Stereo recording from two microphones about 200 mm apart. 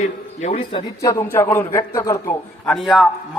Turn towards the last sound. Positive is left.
turn(degrees=0)  # may be behind; listen again after turning